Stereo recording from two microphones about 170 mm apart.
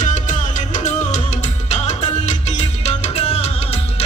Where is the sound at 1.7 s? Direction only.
40° left (ahead or behind).